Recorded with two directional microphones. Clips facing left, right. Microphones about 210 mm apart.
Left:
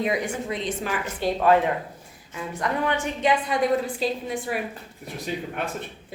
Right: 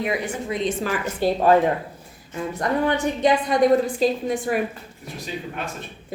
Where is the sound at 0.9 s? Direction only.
40° right (ahead or behind).